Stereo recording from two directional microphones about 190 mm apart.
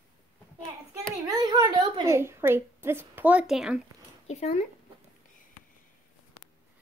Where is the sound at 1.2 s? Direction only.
20° right (ahead or behind); by 3.8 s centre (ahead or behind).